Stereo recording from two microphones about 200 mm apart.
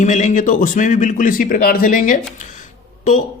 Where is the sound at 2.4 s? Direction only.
40° left (ahead or behind).